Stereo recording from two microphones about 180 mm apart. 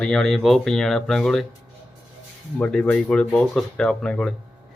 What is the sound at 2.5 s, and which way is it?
Speech, 5° left (ahead or behind).